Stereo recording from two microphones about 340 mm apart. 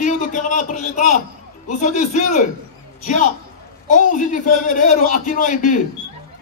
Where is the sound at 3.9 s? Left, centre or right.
Left.